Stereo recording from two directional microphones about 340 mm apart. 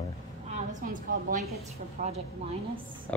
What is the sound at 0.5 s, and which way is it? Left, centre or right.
A woman's voice, right.